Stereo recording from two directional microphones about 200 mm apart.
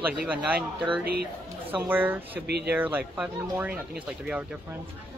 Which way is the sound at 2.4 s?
55° right (ahead or behind).